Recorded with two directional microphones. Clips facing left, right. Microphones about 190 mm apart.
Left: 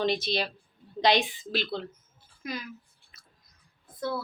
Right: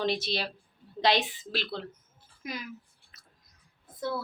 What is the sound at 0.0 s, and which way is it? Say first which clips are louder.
A woman's voice: left 2 dB; 5° right (ahead or behind).